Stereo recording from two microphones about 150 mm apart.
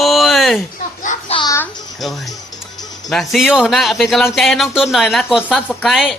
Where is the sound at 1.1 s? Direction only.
55° left (ahead or behind).